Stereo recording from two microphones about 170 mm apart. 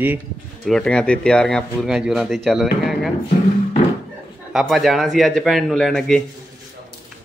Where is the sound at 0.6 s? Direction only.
5° left (ahead or behind).